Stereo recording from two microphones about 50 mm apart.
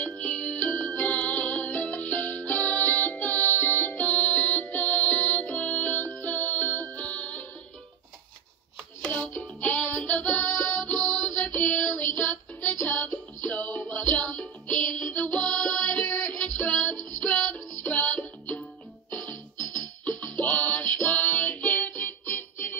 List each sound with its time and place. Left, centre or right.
0.0 s music: left
9.4 s music: left
22.2 s music: left